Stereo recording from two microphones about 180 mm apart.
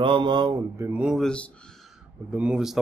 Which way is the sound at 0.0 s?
25° right (ahead or behind).